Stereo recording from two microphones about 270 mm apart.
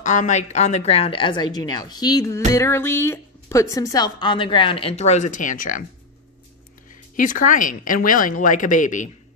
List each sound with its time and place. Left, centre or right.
0.0 s a woman's voice: left
7.2 s a woman's voice: left